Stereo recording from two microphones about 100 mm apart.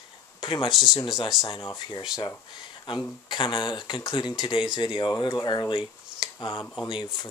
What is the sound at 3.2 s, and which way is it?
Speech, 55° left (ahead or behind).